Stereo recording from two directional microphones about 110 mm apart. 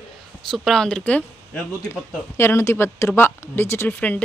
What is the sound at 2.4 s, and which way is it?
Speech, 25° left (ahead or behind).